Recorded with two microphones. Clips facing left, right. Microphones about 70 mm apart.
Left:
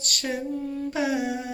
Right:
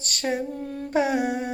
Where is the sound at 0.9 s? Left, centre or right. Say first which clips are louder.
Right 5 dB; right.